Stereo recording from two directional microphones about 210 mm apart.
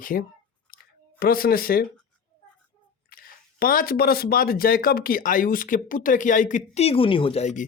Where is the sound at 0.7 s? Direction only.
45° left (ahead or behind).